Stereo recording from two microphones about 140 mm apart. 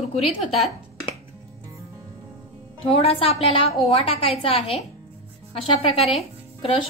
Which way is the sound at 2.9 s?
45° left (ahead or behind).